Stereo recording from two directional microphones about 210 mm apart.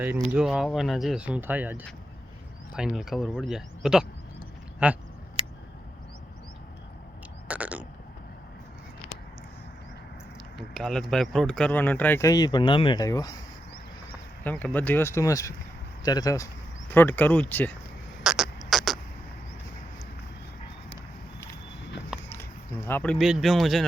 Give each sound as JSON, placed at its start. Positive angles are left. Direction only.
{"t": 0.3, "sound": "speech", "side_deg": 0}
{"t": 7.4, "sound": "burping", "side_deg": -5}
{"t": 10.6, "sound": "speech", "side_deg": 0}
{"t": 14.4, "sound": "speech", "side_deg": 10}
{"t": 18.2, "sound": "beatboxing", "side_deg": -5}
{"t": 22.1, "sound": "a sound", "side_deg": 0}
{"t": 22.9, "sound": "speech", "side_deg": 5}